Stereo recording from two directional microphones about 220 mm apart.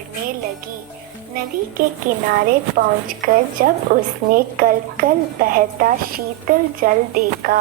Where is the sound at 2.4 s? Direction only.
40° right (ahead or behind).